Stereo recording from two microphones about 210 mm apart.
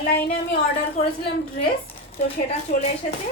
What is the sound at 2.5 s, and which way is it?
Speech, 30° left (ahead or behind).